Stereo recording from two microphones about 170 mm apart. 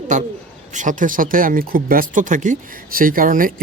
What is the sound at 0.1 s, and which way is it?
Speech, 45° right (ahead or behind).